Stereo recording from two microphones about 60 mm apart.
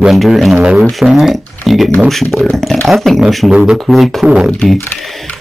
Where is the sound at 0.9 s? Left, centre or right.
Centre.